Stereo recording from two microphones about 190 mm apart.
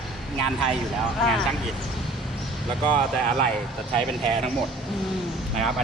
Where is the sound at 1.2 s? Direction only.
Centre (ahead or behind).